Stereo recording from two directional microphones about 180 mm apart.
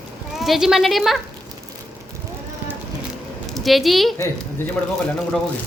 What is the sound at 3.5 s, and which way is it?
Speech, centre (ahead or behind).